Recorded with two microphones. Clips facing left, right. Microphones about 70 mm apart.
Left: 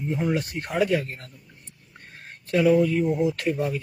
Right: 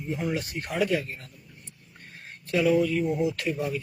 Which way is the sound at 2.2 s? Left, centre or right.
Left.